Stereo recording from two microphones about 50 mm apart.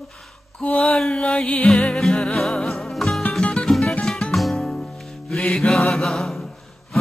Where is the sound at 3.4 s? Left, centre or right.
Centre.